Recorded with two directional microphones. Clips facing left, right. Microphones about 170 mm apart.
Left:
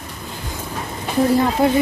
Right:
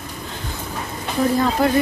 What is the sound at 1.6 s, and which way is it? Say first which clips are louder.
Speech: left 1 dB; 25° left (ahead or behind).